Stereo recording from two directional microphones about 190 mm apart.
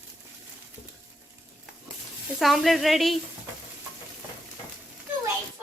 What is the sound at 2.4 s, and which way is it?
Speech, centre (ahead or behind).